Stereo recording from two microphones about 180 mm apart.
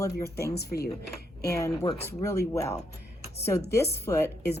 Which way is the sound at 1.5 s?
15° left (ahead or behind).